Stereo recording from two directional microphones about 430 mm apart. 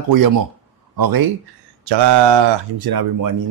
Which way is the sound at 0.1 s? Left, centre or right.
Right.